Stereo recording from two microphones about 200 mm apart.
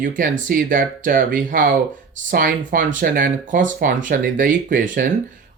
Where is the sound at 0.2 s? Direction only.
45° right (ahead or behind).